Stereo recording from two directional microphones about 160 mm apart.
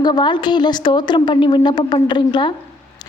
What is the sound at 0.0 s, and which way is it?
A woman's voice, 30° left (ahead or behind).